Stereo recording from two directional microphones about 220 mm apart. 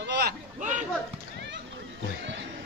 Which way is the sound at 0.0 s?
45° right (ahead or behind).